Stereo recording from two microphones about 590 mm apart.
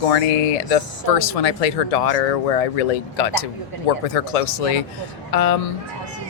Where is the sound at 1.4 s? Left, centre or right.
Left.